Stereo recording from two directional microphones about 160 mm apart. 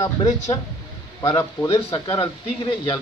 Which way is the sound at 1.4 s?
15° left (ahead or behind).